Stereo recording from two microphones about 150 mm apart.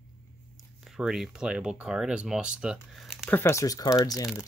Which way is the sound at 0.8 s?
Centre (ahead or behind).